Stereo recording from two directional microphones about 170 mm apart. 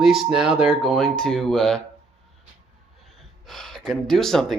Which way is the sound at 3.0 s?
Centre (ahead or behind).